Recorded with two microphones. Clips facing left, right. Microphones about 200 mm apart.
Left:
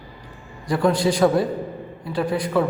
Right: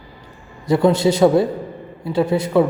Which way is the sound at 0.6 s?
25° right (ahead or behind).